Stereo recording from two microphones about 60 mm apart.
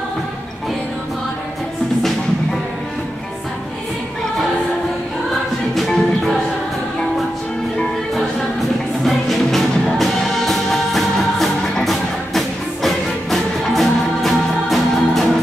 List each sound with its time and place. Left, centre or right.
9.0 s music: centre